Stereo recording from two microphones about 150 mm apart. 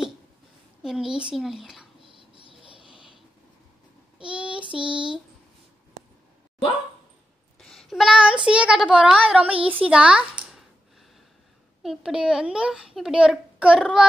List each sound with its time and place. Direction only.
0.8 s a child's voice: 5° right (ahead or behind)
2.0 s a sound: 35° right (ahead or behind)
4.2 s child singing: 5° right (ahead or behind)
4.7 s a sound: 5° right (ahead or behind)
7.5 s child singing: 5° left (ahead or behind)
8.5 s a woman's voice: 5° right (ahead or behind)
11.8 s a child's voice: 5° right (ahead or behind)